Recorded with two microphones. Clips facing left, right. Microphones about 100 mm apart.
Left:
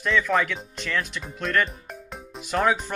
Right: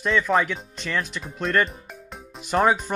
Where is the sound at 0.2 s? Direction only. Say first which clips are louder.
Right 2 dB; 20° right (ahead or behind).